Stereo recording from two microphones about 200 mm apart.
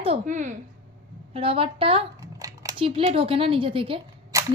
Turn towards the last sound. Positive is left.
turn(degrees=-15)  # may be behind; listen again after turning